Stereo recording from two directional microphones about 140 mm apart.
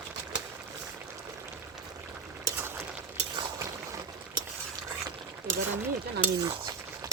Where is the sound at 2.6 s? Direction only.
15° right (ahead or behind).